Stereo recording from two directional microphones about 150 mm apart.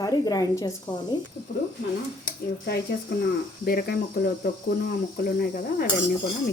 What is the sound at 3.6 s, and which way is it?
Speech, 85° left.